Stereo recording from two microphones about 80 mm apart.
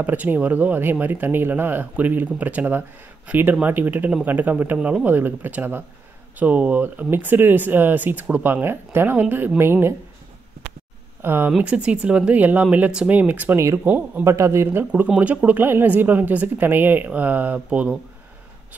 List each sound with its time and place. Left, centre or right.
0.0 s speech: right
11.2 s speech: right
11.5 s speech: centre
14.2 s speech: right
14.9 s speech: centre